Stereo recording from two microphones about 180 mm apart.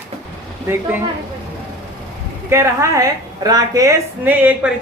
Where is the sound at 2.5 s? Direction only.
15° right (ahead or behind).